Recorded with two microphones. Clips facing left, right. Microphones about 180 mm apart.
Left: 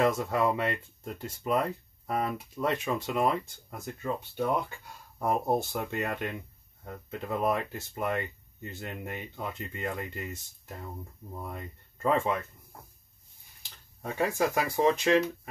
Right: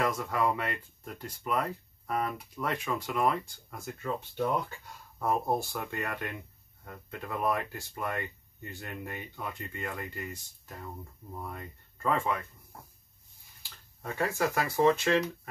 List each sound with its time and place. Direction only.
0.0 s speech: 25° left (ahead or behind)
5.2 s speech: 20° left (ahead or behind)
12.0 s speech: 25° left (ahead or behind)
13.6 s speech: 20° left (ahead or behind)